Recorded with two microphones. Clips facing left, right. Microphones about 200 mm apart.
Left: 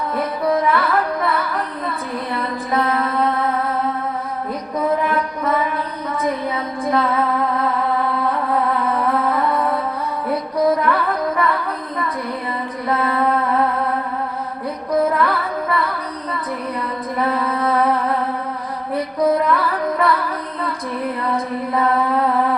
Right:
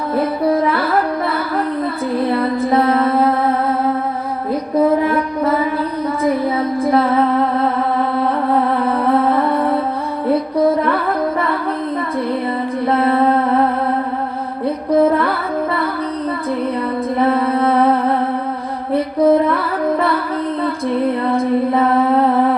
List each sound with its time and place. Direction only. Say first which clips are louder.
0.2 s music: right 4 dB; 30° right (ahead or behind)
5.0 s music: right 4 dB; 30° right (ahead or behind)
6.9 s music: right 4 dB; 30° right (ahead or behind)
8.8 s music: right 4 dB; 30° right (ahead or behind)
12.9 s music: right 4 dB; 30° right (ahead or behind)
14.9 s music: right 3 dB; 30° right (ahead or behind)
17.2 s music: right 5 dB; 25° right (ahead or behind)
18.9 s music: right 5 dB; 25° right (ahead or behind)